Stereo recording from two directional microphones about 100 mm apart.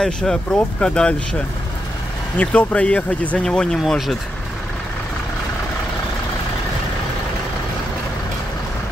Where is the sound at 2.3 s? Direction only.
15° left (ahead or behind).